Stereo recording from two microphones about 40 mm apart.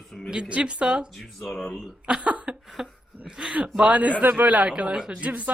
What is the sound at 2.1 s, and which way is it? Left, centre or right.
Speech, right.